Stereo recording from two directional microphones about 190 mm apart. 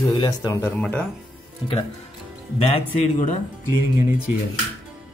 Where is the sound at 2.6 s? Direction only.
35° left (ahead or behind).